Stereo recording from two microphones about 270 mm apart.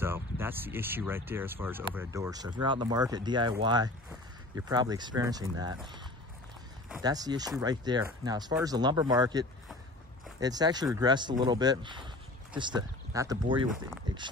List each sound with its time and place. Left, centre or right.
0.0 s speech: centre
7.0 s speech: centre